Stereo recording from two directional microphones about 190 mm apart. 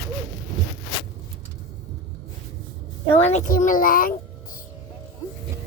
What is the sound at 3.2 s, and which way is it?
Speech, 40° left (ahead or behind).